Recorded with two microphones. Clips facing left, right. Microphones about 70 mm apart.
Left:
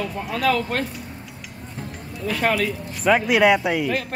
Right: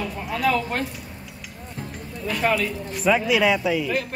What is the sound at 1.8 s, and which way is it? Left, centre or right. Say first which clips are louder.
Music: left 1 dB; centre.